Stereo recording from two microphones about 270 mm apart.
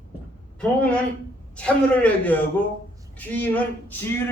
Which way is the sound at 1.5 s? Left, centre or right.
Centre.